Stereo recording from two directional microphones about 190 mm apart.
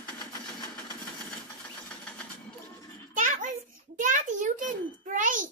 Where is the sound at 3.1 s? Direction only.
40° right (ahead or behind).